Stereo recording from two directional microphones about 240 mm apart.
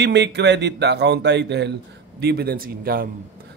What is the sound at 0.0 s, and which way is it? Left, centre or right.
A man's voice, right.